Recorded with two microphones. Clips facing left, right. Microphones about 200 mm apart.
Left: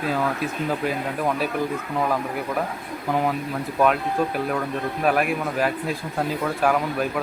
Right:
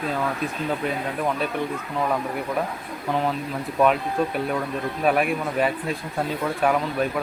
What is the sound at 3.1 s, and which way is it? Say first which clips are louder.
Speech: left 1 dB; 10° left (ahead or behind).